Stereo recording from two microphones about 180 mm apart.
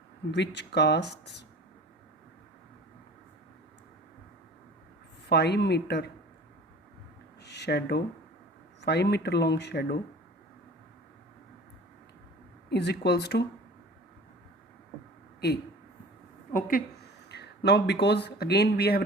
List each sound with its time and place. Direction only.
0.3 s speech: 75° left (ahead or behind)
5.3 s speech: 65° left (ahead or behind)
7.4 s speech: 70° left (ahead or behind)
12.7 s speech: 65° left (ahead or behind)
16.5 s a woman's voice: 50° left (ahead or behind)
17.2 s speech: 70° left (ahead or behind)